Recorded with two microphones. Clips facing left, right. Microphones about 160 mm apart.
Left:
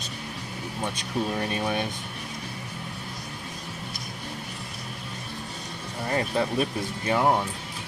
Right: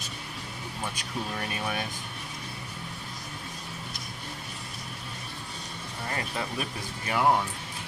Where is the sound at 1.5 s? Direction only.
25° left (ahead or behind).